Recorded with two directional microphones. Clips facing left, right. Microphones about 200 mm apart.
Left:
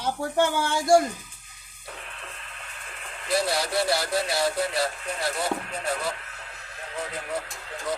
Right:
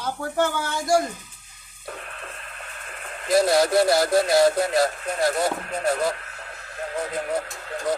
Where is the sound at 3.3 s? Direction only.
45° right (ahead or behind).